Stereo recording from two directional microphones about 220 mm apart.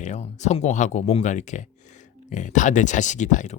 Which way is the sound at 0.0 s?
30° left (ahead or behind).